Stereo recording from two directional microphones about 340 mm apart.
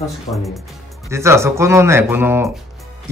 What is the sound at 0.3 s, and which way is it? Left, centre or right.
Speech, centre.